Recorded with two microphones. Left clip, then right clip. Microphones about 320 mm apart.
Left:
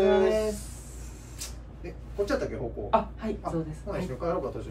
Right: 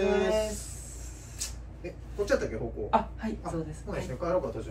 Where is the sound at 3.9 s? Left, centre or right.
Centre.